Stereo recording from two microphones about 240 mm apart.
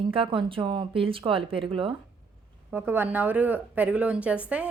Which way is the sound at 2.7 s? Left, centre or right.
Centre.